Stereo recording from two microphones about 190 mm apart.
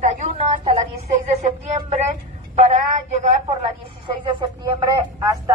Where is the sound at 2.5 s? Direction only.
35° right (ahead or behind).